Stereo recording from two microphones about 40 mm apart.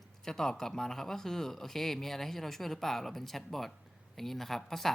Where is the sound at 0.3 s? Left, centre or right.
Centre.